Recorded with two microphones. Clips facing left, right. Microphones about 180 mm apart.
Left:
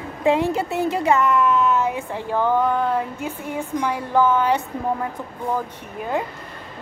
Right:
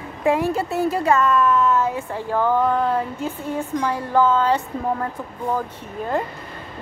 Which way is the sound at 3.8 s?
15° left (ahead or behind).